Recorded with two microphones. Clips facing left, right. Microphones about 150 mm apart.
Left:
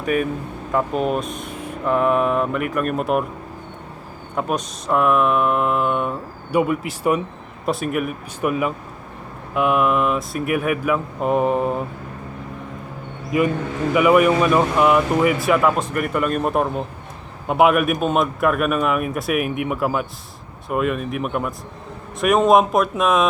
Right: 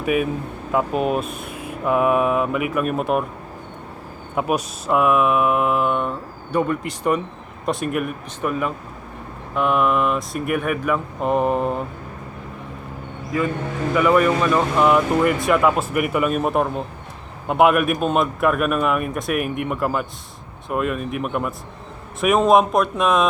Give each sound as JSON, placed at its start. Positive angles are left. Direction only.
{"t": 0.0, "sound": "speech", "side_deg": -5}
{"t": 4.4, "sound": "speech", "side_deg": -5}
{"t": 13.3, "sound": "a man's voice", "side_deg": 20}